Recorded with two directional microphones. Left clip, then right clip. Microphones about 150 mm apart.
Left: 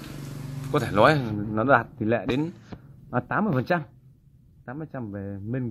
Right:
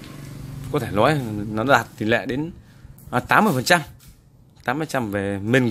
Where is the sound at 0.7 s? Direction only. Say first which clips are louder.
Even; 20° right (ahead or behind).